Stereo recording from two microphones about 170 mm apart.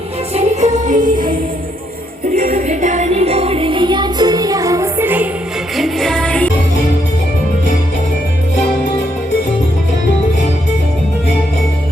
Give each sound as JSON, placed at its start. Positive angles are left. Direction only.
{"t": 0.3, "sound": "music", "side_deg": -40}
{"t": 2.3, "sound": "music", "side_deg": -50}
{"t": 5.7, "sound": "music", "side_deg": 0}